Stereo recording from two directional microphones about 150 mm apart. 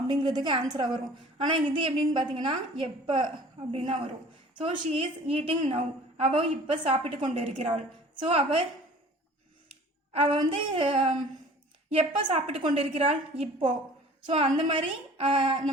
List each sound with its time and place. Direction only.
0.1 s a woman's voice: 30° right (ahead or behind)
10.1 s a woman's voice: 40° right (ahead or behind)